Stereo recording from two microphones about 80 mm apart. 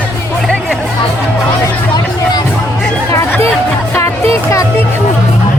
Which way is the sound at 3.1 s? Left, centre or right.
Left.